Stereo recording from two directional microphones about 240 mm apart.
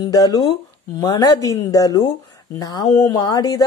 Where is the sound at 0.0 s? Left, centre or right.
Centre.